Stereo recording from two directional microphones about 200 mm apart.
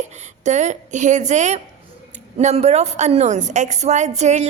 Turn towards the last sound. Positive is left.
turn(degrees=-35)  # may be behind; listen again after turning